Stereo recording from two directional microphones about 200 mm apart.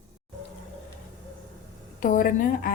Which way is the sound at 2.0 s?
45° left (ahead or behind).